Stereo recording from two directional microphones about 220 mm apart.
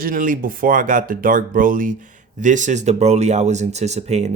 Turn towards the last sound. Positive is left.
turn(degrees=-30)  # may be behind; listen again after turning